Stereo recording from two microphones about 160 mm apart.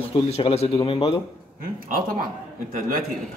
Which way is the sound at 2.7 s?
65° right (ahead or behind).